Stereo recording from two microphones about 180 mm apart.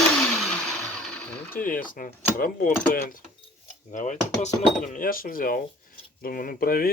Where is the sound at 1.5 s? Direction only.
50° left (ahead or behind).